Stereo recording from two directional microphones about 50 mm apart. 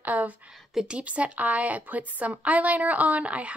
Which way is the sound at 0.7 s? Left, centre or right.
Right.